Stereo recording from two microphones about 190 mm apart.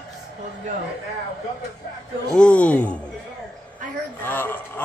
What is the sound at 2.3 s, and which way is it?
Speech, 5° left (ahead or behind).